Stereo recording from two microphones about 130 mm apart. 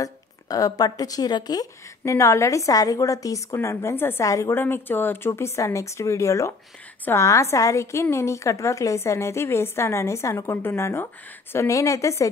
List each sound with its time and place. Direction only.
0.0 s a woman's voice: 25° left (ahead or behind)